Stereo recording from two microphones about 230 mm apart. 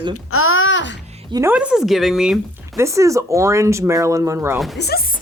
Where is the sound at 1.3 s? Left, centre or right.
Centre.